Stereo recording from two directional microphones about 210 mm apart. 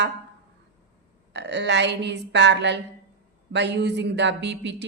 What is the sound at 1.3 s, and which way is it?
Speech, 55° right (ahead or behind).